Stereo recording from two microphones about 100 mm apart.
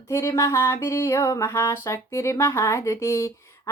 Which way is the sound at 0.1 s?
30° left (ahead or behind).